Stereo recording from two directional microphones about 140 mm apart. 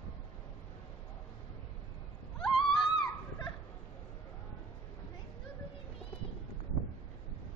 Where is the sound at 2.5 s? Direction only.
35° left (ahead or behind).